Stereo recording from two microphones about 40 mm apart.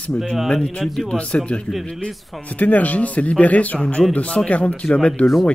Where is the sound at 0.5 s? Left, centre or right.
Left.